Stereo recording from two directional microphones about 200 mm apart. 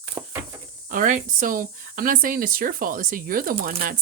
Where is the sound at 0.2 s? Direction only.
15° right (ahead or behind).